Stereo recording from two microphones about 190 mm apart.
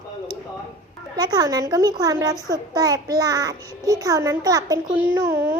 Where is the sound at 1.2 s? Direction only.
20° right (ahead or behind).